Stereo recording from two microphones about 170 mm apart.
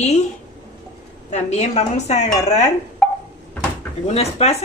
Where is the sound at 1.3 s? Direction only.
40° left (ahead or behind).